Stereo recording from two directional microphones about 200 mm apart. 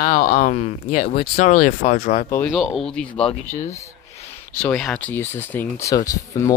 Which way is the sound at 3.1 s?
30° left (ahead or behind).